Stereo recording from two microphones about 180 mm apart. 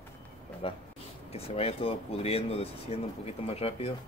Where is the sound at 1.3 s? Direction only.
35° left (ahead or behind).